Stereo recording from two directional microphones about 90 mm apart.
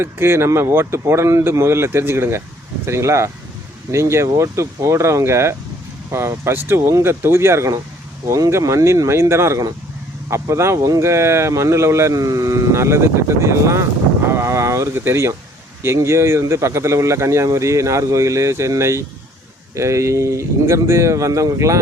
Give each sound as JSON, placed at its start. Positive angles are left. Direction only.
{"t": 0.0, "sound": "speech", "side_deg": -25}